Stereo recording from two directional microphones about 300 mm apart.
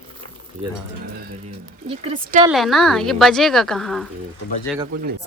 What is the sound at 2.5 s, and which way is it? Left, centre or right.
A woman's voice, centre.